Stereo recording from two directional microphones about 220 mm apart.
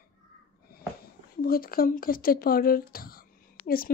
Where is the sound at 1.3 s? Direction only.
40° left (ahead or behind).